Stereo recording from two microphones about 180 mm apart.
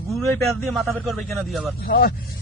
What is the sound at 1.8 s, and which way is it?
Speech, 55° left (ahead or behind).